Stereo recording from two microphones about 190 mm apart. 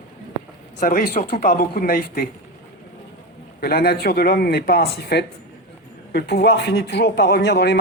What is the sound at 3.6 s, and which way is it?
A man's voice, 55° left (ahead or behind).